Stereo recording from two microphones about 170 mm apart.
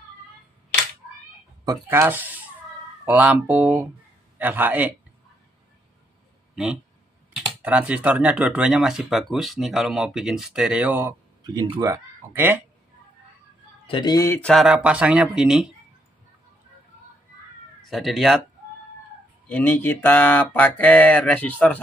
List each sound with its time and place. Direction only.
1.7 s speech: 10° right (ahead or behind)
6.5 s speech: 5° right (ahead or behind); by 11.9 s 25° right (ahead or behind)
11.9 s speech: 10° right (ahead or behind)
13.8 s speech: 25° left (ahead or behind)
14.5 s speech: centre (ahead or behind)
17.8 s speech: centre (ahead or behind)
19.4 s speech: 10° left (ahead or behind)